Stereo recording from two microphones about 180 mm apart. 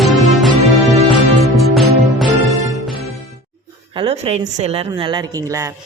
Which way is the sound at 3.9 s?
30° right (ahead or behind).